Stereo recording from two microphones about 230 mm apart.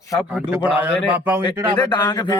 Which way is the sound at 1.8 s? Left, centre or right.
Centre.